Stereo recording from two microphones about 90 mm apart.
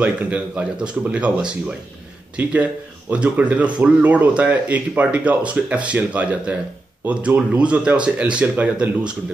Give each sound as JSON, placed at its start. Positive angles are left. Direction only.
{"t": 0.0, "sound": "speech", "side_deg": -15}